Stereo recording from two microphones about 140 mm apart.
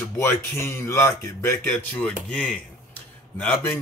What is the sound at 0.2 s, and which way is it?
A man's voice, 15° left (ahead or behind).